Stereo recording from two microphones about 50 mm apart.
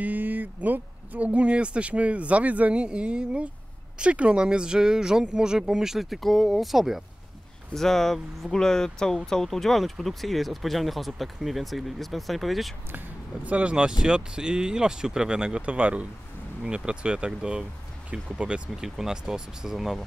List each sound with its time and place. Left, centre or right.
0.0 s speech: right; by 7.0 s centre
7.7 s speech: centre
13.4 s speech: right; by 20.1 s centre